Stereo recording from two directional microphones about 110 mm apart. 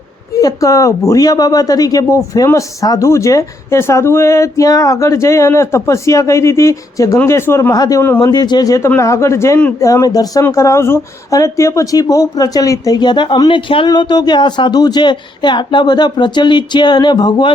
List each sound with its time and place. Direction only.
0.3 s speech: 30° left (ahead or behind)